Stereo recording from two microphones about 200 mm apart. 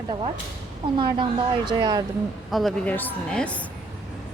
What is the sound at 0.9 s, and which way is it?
A woman's voice, 25° right (ahead or behind).